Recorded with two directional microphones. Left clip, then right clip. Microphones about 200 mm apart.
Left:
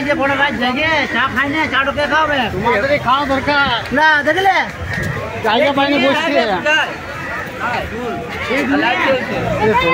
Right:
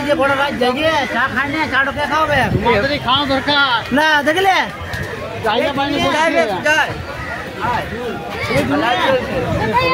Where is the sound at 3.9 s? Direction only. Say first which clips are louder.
Left 4 dB; 30° right (ahead or behind).